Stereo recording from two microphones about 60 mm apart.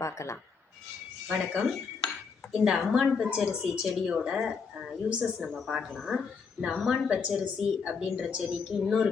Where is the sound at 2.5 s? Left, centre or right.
Centre.